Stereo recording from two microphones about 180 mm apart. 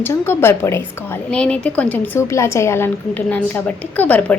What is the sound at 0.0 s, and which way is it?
A woman's voice, 15° left (ahead or behind).